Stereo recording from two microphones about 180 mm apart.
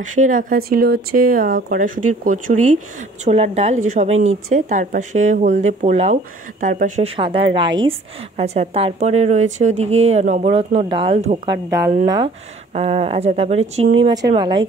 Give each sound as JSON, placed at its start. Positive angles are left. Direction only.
{"t": 0.0, "sound": "a woman's voice", "side_deg": -45}
{"t": 7.2, "sound": "a woman's voice", "side_deg": -30}
{"t": 11.5, "sound": "speech", "side_deg": -15}
{"t": 12.7, "sound": "a woman's voice", "side_deg": -35}
{"t": 14.0, "sound": "a woman's voice", "side_deg": -20}